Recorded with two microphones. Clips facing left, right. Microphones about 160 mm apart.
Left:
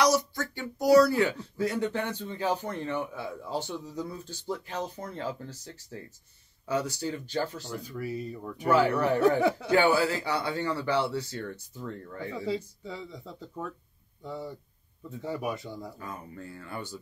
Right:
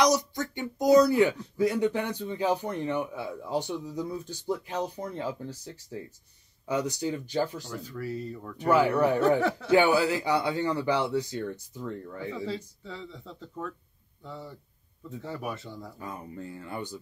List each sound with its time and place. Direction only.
0.0 s speech: 20° right (ahead or behind)
7.6 s speech: 15° left (ahead or behind)
8.6 s speech: 15° right (ahead or behind)
9.4 s speech: 10° left (ahead or behind)
9.7 s speech: 15° right (ahead or behind)
12.4 s speech: 15° left (ahead or behind)
16.0 s speech: 20° right (ahead or behind)